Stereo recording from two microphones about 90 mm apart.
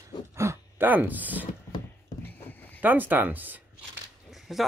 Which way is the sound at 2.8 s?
20° right (ahead or behind).